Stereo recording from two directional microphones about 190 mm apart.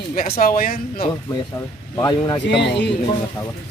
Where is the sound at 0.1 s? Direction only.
50° left (ahead or behind).